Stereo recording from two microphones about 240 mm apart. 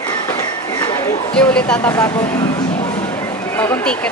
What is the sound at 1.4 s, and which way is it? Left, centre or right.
Speech, centre.